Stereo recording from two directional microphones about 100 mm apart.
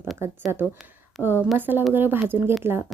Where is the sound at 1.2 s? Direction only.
15° left (ahead or behind).